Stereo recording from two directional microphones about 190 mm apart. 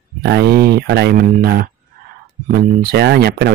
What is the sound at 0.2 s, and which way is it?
Speech, 60° right (ahead or behind).